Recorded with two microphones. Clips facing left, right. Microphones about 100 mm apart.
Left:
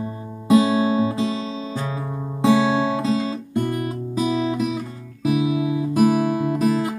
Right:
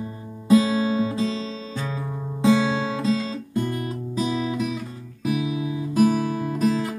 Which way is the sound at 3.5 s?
50° left (ahead or behind).